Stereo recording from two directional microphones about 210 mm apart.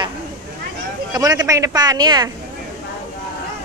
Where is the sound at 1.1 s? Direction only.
15° right (ahead or behind).